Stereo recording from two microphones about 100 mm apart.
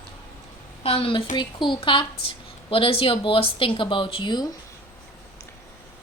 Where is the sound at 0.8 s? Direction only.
70° left (ahead or behind); by 4.5 s 50° left (ahead or behind).